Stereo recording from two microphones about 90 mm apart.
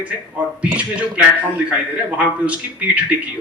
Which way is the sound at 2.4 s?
15° right (ahead or behind).